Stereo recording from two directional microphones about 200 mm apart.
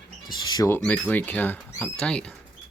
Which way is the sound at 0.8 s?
5° left (ahead or behind).